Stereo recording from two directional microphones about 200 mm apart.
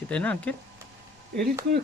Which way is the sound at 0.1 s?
5° left (ahead or behind).